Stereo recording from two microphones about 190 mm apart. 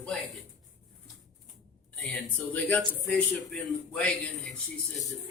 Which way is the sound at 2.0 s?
5° left (ahead or behind).